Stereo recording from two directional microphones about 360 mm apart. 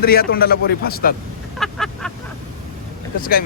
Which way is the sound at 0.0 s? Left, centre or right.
Left.